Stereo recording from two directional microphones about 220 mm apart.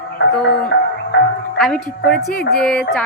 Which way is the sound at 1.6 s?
Centre (ahead or behind).